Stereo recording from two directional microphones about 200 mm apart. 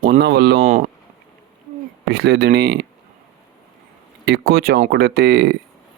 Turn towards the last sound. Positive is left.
turn(degrees=-50)  # may be behind; listen again after turning